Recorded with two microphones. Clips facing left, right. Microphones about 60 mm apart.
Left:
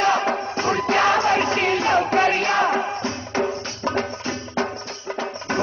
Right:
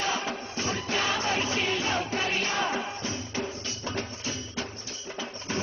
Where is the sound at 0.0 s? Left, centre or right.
Left.